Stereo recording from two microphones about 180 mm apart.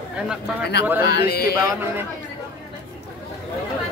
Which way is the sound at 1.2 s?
60° left (ahead or behind).